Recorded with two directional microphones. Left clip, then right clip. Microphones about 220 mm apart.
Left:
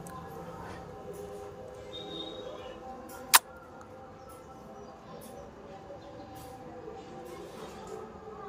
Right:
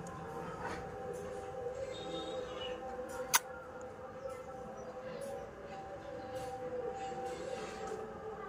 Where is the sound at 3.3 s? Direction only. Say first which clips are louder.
Left 10 dB; 35° left (ahead or behind).